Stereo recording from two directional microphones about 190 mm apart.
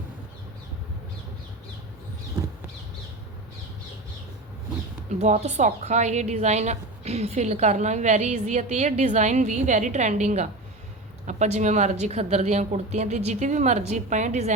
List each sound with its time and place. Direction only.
5.2 s a woman's voice: 35° right (ahead or behind)